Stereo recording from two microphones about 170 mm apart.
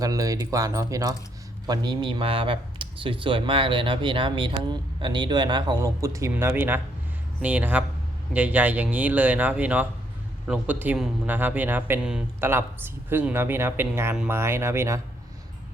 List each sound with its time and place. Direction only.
0.0 s speech: 20° right (ahead or behind)